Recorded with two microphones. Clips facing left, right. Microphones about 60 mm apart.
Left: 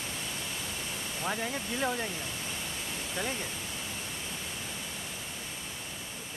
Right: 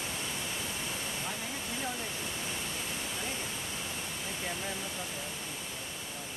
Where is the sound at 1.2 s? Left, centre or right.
Left.